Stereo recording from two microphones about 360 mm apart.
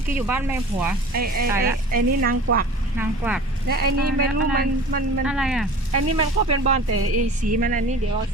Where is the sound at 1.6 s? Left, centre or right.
Right.